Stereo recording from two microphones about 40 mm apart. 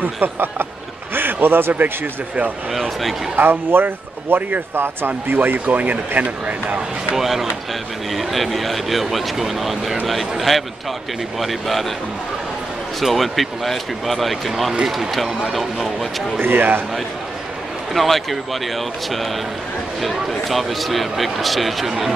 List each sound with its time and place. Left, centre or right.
0.0 s speech: right
1.1 s a sound: right
3.3 s speech: right
4.4 s speech: right
4.7 s speech: right
7.2 s speech: centre
13.0 s speech: centre
16.3 s speech: right
17.9 s speech: centre